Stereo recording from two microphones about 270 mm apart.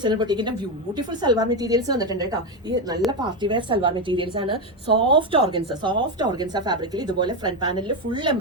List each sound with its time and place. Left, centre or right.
0.0 s a woman's voice: centre